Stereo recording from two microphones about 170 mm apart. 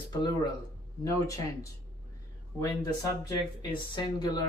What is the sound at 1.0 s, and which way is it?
Speech, 20° left (ahead or behind).